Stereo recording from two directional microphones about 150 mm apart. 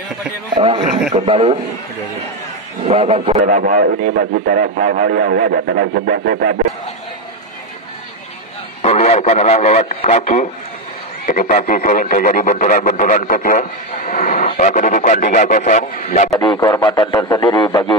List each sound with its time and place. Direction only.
0.6 s a man's voice: 35° right (ahead or behind)
2.8 s speech: 40° right (ahead or behind)
3.4 s speech: 60° right (ahead or behind); by 6.6 s 85° right
8.8 s a man's voice: 45° left (ahead or behind)
11.2 s speech: 60° left (ahead or behind)
13.6 s speech: 55° left (ahead or behind)
16.0 s a man's voice: 45° left (ahead or behind)
16.3 s a man's voice: 30° left (ahead or behind)